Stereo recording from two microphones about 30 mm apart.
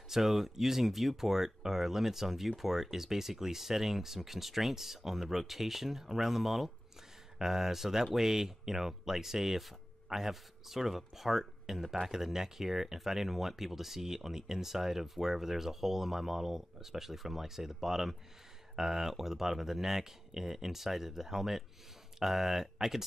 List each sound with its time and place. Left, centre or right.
0.1 s speech: centre
12.1 s speech: centre